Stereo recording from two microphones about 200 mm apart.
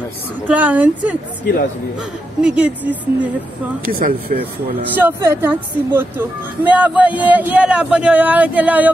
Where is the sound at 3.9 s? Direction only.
45° right (ahead or behind).